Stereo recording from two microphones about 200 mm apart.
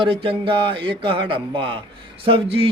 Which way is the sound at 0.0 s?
25° right (ahead or behind).